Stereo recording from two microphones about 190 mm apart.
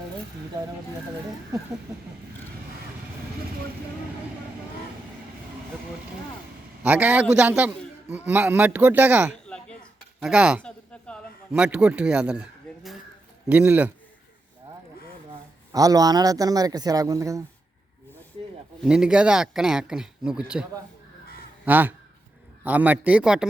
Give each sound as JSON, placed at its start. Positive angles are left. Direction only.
{"t": 6.8, "sound": "a man's voice", "side_deg": -5}
{"t": 10.6, "sound": "a sound", "side_deg": 5}
{"t": 11.6, "sound": "a man's voice", "side_deg": -5}
{"t": 15.7, "sound": "a man's voice", "side_deg": -20}
{"t": 18.8, "sound": "a man's voice", "side_deg": -5}